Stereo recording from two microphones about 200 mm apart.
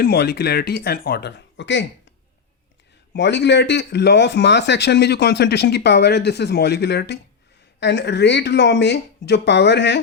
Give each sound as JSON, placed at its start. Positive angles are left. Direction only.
{"t": 0.0, "sound": "speech", "side_deg": 55}
{"t": 3.1, "sound": "speech", "side_deg": 60}